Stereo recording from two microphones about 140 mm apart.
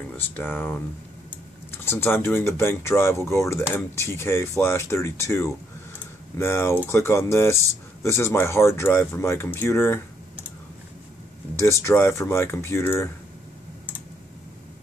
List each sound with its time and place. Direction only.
0.4 s speech: 15° left (ahead or behind)
11.5 s speech: 20° left (ahead or behind)